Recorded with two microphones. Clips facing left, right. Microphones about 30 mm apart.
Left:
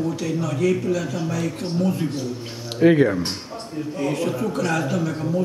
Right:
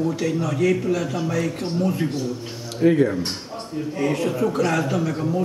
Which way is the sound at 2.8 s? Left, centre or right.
Left.